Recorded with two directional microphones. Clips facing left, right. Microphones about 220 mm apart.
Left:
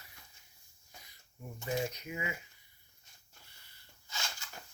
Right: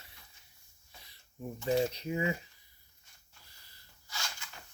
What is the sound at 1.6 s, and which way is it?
Speech, 30° right (ahead or behind).